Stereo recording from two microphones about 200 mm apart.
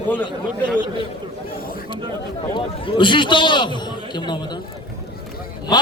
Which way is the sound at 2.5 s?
25° left (ahead or behind).